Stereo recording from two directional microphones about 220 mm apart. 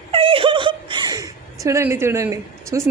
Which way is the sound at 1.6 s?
10° right (ahead or behind).